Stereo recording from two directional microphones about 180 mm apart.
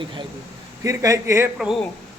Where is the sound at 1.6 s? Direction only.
Centre (ahead or behind).